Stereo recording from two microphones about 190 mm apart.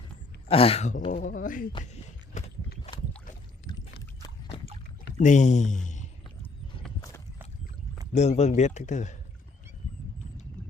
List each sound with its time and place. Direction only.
0.4 s a man's voice: 30° left (ahead or behind)
1.1 s speech: 45° left (ahead or behind)
1.8 s a sound: 40° left (ahead or behind)
2.9 s boat: 20° left (ahead or behind)
3.7 s rowboat: 20° left (ahead or behind)
5.1 s speech: 40° left (ahead or behind)
8.1 s a man's voice: 35° left (ahead or behind)